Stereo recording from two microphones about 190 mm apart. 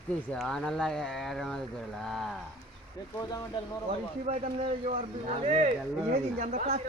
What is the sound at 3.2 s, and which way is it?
Speech, 20° left (ahead or behind).